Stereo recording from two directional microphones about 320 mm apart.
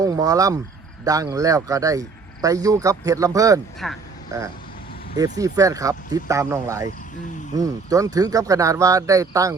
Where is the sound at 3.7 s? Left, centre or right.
Centre.